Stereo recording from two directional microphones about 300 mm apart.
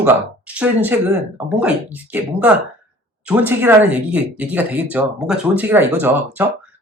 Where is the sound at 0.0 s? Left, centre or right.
Centre.